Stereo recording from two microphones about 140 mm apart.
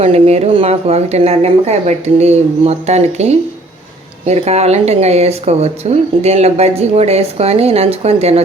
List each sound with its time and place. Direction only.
0.0 s speech: 45° right (ahead or behind)